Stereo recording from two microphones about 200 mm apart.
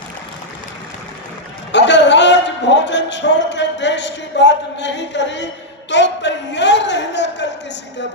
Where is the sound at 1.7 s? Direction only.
60° left (ahead or behind).